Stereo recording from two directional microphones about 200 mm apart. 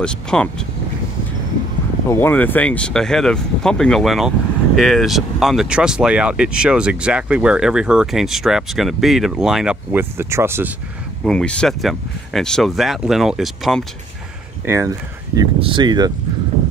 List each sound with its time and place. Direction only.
0.0 s speech: 5° left (ahead or behind)
2.0 s speech: 10° left (ahead or behind); by 10.7 s 10° right (ahead or behind)
11.2 s speech: 5° left (ahead or behind)
14.7 s speech: 15° right (ahead or behind)